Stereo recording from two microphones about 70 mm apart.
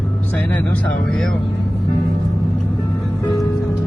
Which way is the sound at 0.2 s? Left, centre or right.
Left.